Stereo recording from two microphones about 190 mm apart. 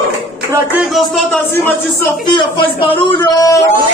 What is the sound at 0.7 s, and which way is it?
Speech, centre (ahead or behind).